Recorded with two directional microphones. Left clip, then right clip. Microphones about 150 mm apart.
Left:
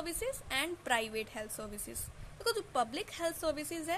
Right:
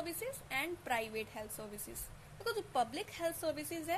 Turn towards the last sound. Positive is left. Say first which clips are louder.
# left 3 dB
turn(degrees=20)  # may be behind; listen again after turning